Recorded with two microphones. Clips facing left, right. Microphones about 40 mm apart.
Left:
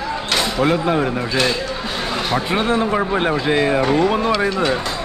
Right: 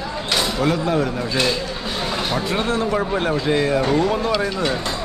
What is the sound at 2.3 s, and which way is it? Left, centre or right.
Speech, left.